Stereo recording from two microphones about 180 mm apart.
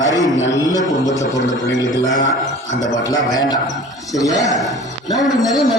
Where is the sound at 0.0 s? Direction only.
20° left (ahead or behind).